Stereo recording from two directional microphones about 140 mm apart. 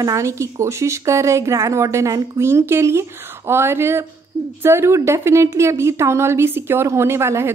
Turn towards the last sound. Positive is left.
turn(degrees=-20)  # may be behind; listen again after turning